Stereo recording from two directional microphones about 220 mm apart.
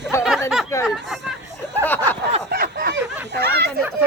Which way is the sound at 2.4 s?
45° right (ahead or behind).